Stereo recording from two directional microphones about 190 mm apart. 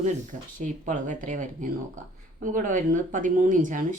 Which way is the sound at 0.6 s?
40° right (ahead or behind).